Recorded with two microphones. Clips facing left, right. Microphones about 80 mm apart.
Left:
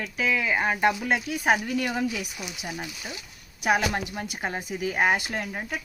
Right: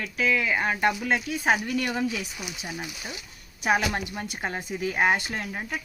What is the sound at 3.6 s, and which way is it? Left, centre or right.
Speech, centre.